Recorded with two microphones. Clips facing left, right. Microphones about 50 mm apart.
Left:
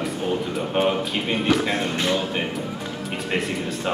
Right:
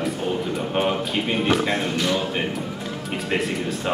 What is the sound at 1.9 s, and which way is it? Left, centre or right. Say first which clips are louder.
Speech: even; left.